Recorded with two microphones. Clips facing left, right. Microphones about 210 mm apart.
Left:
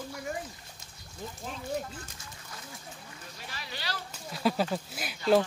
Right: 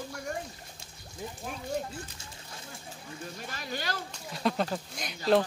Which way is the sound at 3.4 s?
50° right (ahead or behind).